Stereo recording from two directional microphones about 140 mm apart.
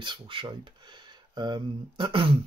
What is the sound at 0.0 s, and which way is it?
Speech, 35° right (ahead or behind).